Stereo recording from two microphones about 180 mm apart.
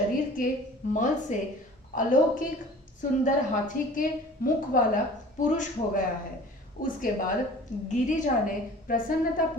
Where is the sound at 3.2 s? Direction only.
45° left (ahead or behind).